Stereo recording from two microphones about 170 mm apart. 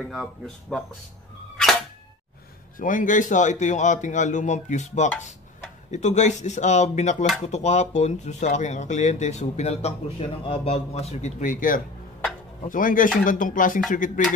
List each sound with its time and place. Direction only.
0.1 s speech: centre (ahead or behind)
2.8 s speech: 50° left (ahead or behind)